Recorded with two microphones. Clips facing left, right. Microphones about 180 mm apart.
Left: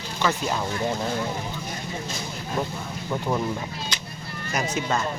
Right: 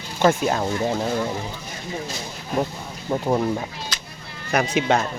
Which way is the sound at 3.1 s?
30° right (ahead or behind).